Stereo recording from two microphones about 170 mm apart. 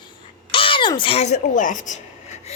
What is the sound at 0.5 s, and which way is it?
A woman's voice, 30° left (ahead or behind).